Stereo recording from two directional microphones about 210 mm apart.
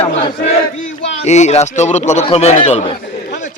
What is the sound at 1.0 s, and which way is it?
Speech, 35° left (ahead or behind).